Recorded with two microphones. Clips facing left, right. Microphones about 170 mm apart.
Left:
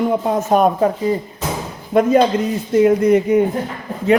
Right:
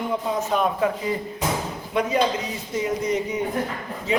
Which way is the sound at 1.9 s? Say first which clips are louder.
Left 9 dB; 50° left (ahead or behind).